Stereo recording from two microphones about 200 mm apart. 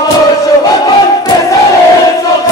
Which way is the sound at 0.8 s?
20° left (ahead or behind).